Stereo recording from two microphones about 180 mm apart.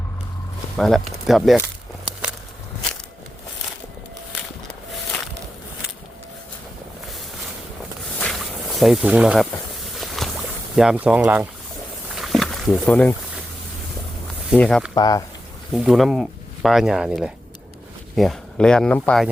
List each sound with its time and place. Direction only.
0.8 s speech: centre (ahead or behind)
8.8 s speech: centre (ahead or behind)
10.2 s boat: centre (ahead or behind)
10.8 s speech: 5° right (ahead or behind)
12.1 s a sound: centre (ahead or behind)
14.6 s speech: 5° left (ahead or behind)
14.9 s speech: 20° left (ahead or behind)
15.7 s speech: centre (ahead or behind)